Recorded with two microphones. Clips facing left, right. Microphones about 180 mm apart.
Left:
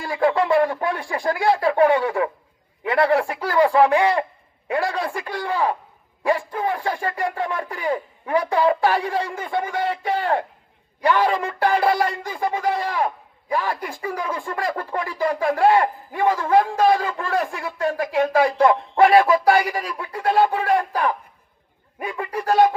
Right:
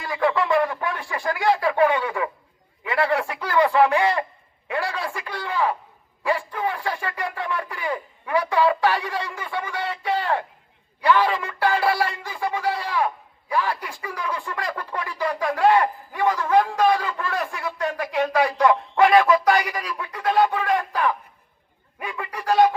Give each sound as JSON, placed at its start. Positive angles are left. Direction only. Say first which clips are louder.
{"t": 0.0, "sound": "speech", "louder": "left 3 dB", "side_deg": 35}
{"t": 4.9, "sound": "speech", "louder": "left 4 dB", "side_deg": 50}
{"t": 18.6, "sound": "speech", "louder": "even", "side_deg": 35}
{"t": 19.0, "sound": "speech", "louder": "left 2 dB", "side_deg": 45}